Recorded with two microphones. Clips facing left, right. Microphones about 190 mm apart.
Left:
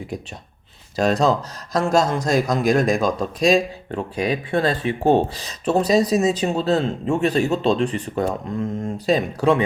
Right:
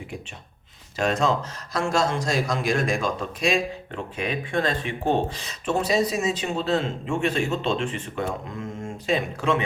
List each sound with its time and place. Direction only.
0.9 s speech: 35° left (ahead or behind)